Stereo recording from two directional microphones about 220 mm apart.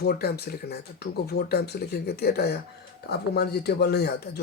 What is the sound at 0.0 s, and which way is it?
Speech, 45° left (ahead or behind).